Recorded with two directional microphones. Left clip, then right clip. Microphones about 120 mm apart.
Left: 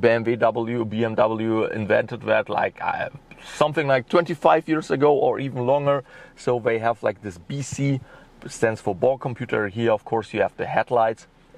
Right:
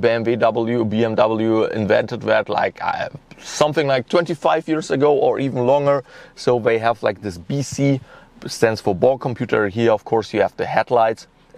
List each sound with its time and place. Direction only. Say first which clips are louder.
0.2 s speech: right 4 dB; 35° right (ahead or behind); by 3.7 s 50° right (ahead or behind)
4.1 s speech: right 1 dB; 5° right (ahead or behind)
5.3 s speech: right 5 dB; 45° right (ahead or behind)
7.4 s speech: right 8 dB; 5° right (ahead or behind)
8.5 s speech: right 5 dB; 45° right (ahead or behind)